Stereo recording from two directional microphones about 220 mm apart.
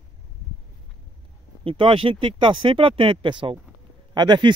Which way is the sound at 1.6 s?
25° right (ahead or behind).